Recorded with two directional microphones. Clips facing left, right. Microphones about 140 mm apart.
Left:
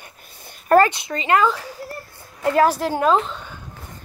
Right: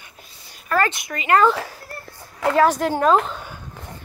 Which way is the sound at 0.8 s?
20° left (ahead or behind).